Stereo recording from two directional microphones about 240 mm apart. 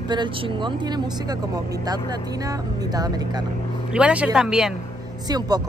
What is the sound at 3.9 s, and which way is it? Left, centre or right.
Speech, centre.